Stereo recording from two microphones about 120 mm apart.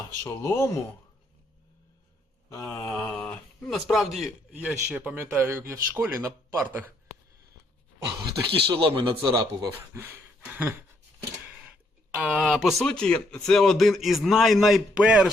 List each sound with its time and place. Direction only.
0.3 s speech: 25° left (ahead or behind)
2.5 s speech: 30° left (ahead or behind)
2.9 s a sound: 10° left (ahead or behind)
3.7 s speech: centre (ahead or behind); by 6.8 s 25° right (ahead or behind)
8.4 s a man's voice: 45° right (ahead or behind)
9.9 s a sound: 20° right (ahead or behind)
12.1 s speech: 10° right (ahead or behind)